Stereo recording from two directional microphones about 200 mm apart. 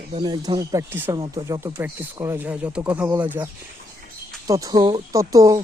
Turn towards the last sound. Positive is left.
turn(degrees=-15)  # may be behind; listen again after turning